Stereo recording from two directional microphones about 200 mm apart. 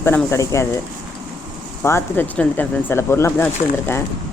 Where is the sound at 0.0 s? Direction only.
10° left (ahead or behind).